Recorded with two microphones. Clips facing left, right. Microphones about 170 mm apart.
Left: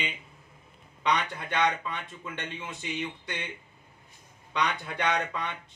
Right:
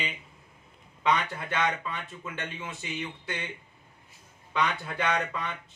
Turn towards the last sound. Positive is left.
turn(degrees=-5)  # may be behind; listen again after turning